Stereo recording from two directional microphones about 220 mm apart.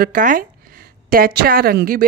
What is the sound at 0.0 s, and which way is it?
Speech, 40° right (ahead or behind).